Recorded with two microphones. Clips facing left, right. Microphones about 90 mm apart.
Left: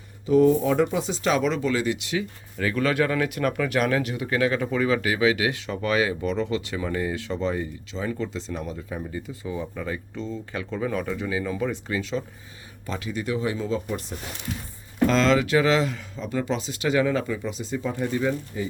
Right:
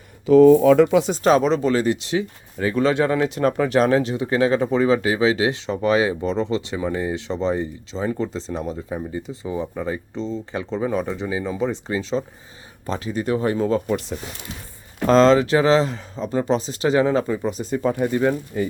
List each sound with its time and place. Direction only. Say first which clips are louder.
0.3 s speech: right 7 dB; 90° right
1.1 s speech: right 6 dB; 40° right (ahead or behind)
15.0 s speech: right 6 dB; 35° right (ahead or behind); by 18.7 s 55° right (ahead or behind)